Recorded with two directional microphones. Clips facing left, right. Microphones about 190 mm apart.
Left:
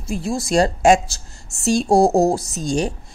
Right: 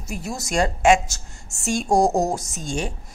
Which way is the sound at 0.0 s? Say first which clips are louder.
Left 7 dB; 30° left (ahead or behind).